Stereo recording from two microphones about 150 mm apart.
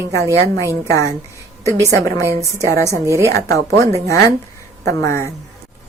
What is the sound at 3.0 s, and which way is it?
Speech, 20° right (ahead or behind).